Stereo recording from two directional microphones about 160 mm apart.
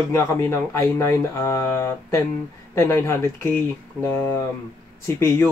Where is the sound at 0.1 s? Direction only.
15° left (ahead or behind).